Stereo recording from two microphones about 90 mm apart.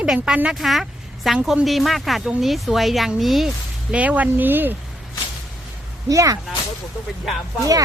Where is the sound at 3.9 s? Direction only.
15° right (ahead or behind).